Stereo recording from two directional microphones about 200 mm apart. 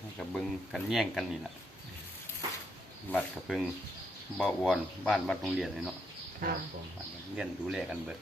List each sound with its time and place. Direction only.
0.2 s speech: centre (ahead or behind)
3.1 s speech: 5° left (ahead or behind)
6.4 s speech: 45° right (ahead or behind)
7.3 s speech: 5° right (ahead or behind)